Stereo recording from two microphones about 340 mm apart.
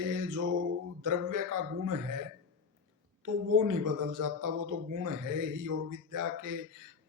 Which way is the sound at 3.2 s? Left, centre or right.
Right.